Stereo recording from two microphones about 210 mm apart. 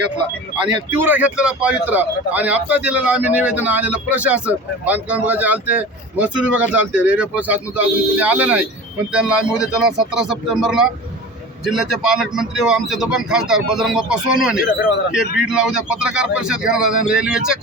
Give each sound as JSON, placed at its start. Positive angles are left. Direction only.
{"t": 0.9, "sound": "a man's voice", "side_deg": -10}